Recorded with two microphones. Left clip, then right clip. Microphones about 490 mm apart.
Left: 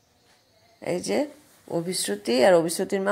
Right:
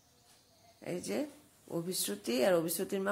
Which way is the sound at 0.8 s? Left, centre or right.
Right.